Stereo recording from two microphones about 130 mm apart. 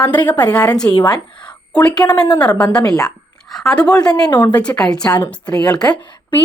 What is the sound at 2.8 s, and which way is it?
Speech, 30° left (ahead or behind).